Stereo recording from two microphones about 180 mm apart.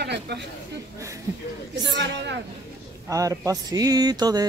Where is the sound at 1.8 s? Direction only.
75° right (ahead or behind).